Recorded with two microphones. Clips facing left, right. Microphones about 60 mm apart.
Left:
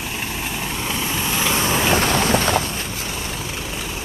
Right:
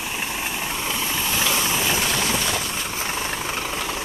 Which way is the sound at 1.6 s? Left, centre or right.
Left.